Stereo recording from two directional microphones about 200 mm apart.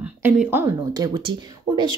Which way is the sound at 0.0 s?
10° right (ahead or behind).